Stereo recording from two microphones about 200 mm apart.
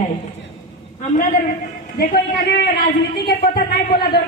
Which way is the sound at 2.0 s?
55° left (ahead or behind).